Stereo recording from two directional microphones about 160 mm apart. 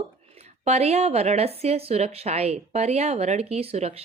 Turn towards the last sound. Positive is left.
turn(degrees=-40)  # may be behind; listen again after turning